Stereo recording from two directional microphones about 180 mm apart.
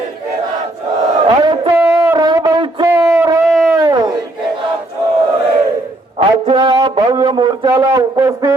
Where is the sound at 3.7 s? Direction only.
20° right (ahead or behind).